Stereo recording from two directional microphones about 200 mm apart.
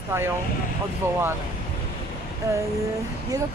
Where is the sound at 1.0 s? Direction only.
15° right (ahead or behind).